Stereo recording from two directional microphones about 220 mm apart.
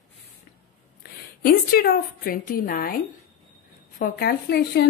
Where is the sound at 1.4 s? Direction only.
45° left (ahead or behind).